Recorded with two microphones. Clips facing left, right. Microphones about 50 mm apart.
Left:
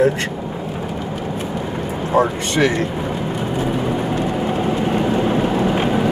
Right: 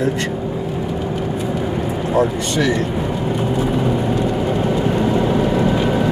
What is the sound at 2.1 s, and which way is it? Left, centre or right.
Speech, left.